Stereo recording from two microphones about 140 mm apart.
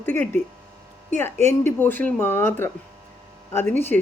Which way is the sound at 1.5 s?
15° left (ahead or behind).